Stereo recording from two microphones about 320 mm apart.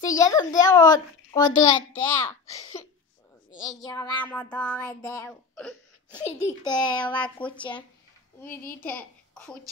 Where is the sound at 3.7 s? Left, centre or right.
Centre.